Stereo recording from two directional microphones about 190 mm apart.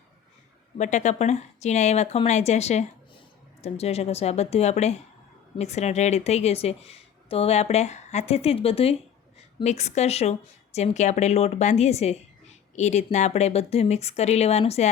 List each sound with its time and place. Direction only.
0.8 s a woman's voice: 40° left (ahead or behind)